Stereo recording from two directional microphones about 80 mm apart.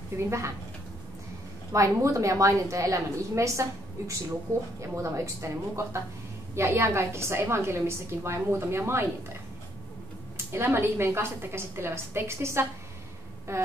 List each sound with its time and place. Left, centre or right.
0.1 s a woman's voice: right
1.7 s a woman's voice: right
4.5 s speech: left
4.9 s a woman's voice: right
10.3 s a woman's voice: right